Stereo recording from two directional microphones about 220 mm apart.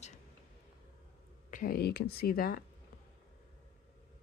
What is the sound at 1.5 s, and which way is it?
Speech, 40° left (ahead or behind).